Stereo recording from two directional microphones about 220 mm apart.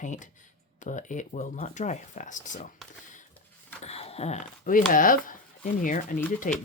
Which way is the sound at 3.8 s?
30° left (ahead or behind).